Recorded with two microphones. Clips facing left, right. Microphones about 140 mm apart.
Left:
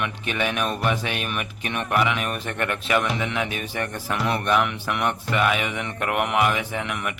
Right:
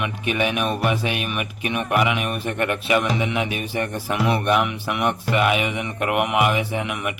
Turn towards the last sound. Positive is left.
turn(degrees=-15)  # may be behind; listen again after turning